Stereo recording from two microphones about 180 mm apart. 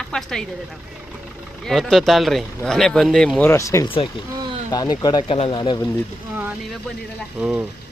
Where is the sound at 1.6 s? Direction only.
Centre (ahead or behind); by 5.8 s 25° left (ahead or behind).